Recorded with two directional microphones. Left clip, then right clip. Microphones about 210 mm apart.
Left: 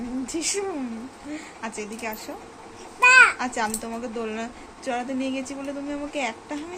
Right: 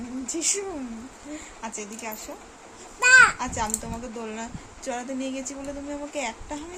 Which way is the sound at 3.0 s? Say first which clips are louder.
Left 1 dB; 30° right (ahead or behind).